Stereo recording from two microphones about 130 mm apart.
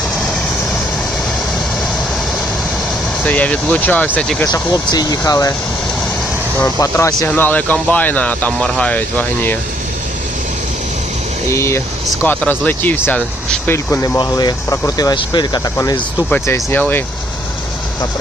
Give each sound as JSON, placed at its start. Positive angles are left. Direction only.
{"t": 3.2, "sound": "speech", "side_deg": 10}
{"t": 4.5, "sound": "speech", "side_deg": 30}
{"t": 6.7, "sound": "speech", "side_deg": 25}
{"t": 11.4, "sound": "speech", "side_deg": 20}
{"t": 14.2, "sound": "speech", "side_deg": 30}
{"t": 16.3, "sound": "speech", "side_deg": 15}